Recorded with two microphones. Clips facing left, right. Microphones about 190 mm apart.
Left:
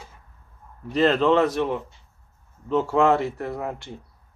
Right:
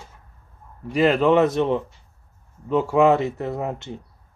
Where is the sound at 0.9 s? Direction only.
10° right (ahead or behind).